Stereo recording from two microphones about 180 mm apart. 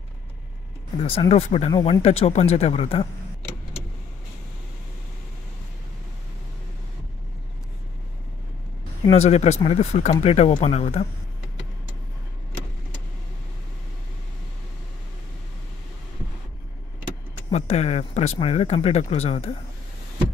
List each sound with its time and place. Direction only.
1.0 s speech: 30° left (ahead or behind)
1.7 s speech: 25° left (ahead or behind)
2.0 s speech: 35° left (ahead or behind)
9.1 s speech: 35° left (ahead or behind)
17.5 s speech: 40° left (ahead or behind)